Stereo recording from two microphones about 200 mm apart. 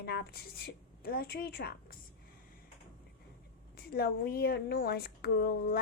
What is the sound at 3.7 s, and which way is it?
A woman's voice, 50° left (ahead or behind).